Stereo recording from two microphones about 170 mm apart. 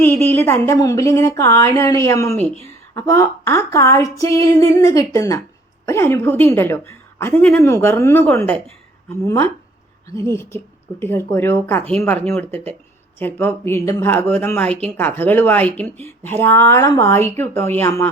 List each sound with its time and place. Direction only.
0.0 s speech: 10° left (ahead or behind)